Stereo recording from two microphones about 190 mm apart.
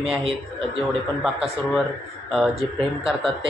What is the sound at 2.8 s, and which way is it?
Speech, 30° right (ahead or behind).